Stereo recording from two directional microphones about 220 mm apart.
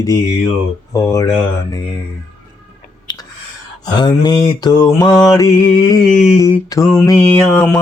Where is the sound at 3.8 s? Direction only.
20° left (ahead or behind).